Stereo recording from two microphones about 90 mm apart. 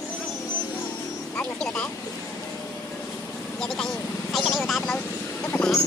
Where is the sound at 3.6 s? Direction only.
5° left (ahead or behind).